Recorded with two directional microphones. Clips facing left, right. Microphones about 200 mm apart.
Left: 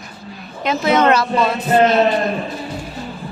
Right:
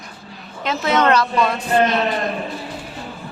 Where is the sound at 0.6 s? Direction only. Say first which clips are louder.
Left 3 dB; 15° left (ahead or behind).